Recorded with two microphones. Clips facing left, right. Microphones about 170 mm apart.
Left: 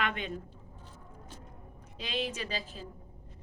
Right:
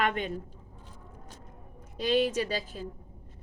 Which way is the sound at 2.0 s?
45° right (ahead or behind).